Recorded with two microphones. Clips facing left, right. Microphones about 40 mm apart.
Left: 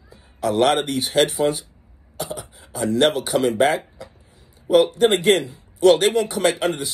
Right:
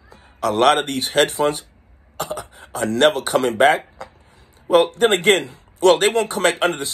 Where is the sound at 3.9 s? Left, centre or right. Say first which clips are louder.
Right 3 dB; right.